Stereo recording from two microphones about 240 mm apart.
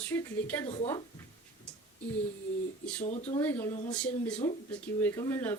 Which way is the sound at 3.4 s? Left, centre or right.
Centre.